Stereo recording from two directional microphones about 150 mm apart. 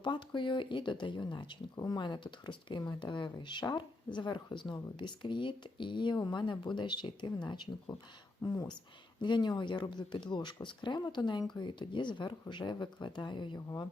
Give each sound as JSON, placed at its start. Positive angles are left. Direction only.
{"t": 0.0, "sound": "speech", "side_deg": 30}
{"t": 9.2, "sound": "speech", "side_deg": 30}